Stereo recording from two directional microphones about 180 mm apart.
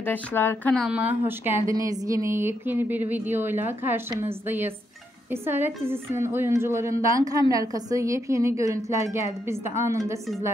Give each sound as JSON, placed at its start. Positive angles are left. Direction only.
{"t": 0.0, "sound": "speech", "side_deg": 10}
{"t": 0.8, "sound": "a woman's voice", "side_deg": -10}